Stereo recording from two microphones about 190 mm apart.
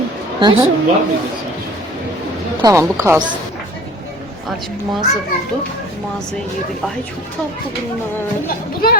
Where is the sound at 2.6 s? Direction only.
20° right (ahead or behind).